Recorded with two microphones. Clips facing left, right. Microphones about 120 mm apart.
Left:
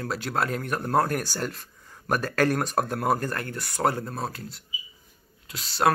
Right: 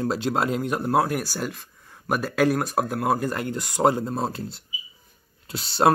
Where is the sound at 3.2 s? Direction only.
15° right (ahead or behind).